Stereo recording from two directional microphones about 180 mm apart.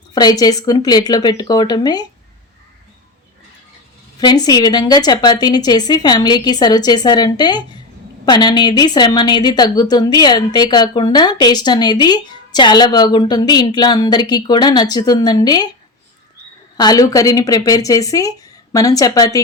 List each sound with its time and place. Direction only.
0.1 s a woman's voice: 20° left (ahead or behind)
4.2 s a woman's voice: 20° left (ahead or behind)
16.7 s a woman's voice: 20° left (ahead or behind)